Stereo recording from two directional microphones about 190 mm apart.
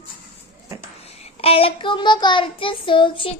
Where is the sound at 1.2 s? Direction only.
30° left (ahead or behind).